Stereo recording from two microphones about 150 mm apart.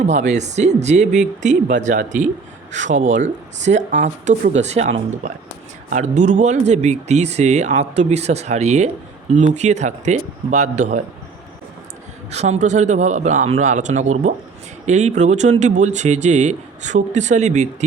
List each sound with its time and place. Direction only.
0.0 s speech: 50° right (ahead or behind)
12.3 s speech: 50° right (ahead or behind)